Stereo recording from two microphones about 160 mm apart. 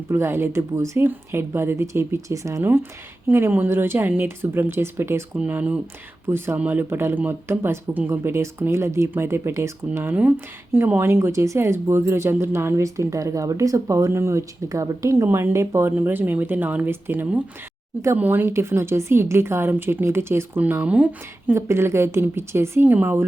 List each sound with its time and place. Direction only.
0.1 s speech: 15° right (ahead or behind)